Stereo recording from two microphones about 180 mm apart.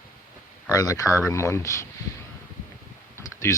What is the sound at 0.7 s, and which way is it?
Speech, 20° left (ahead or behind).